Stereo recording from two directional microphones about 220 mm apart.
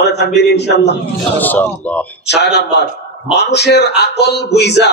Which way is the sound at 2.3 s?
50° left (ahead or behind).